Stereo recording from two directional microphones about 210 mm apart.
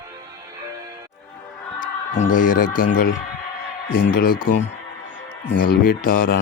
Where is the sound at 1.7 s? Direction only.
40° left (ahead or behind).